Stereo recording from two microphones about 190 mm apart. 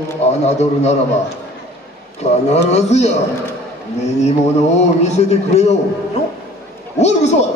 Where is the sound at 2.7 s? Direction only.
35° left (ahead or behind).